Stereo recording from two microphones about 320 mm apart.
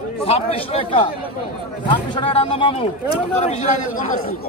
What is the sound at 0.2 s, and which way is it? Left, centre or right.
A man's voice, centre.